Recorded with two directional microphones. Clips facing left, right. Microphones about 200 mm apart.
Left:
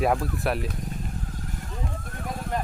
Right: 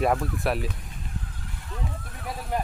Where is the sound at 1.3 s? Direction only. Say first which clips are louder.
Left 7 dB; 45° left (ahead or behind).